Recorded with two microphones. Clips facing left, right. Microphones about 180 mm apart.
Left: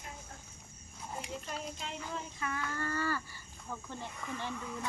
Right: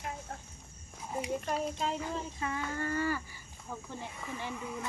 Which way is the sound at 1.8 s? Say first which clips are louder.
Right 7 dB; 40° right (ahead or behind).